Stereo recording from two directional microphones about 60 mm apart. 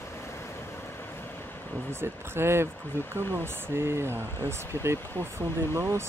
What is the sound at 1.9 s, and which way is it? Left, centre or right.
Speech, right.